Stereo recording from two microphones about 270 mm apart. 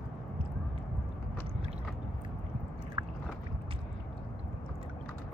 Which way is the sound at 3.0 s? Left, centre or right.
Centre.